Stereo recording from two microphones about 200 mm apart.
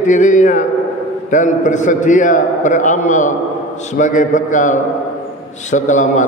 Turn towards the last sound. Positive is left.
turn(degrees=40)  # may be behind; listen again after turning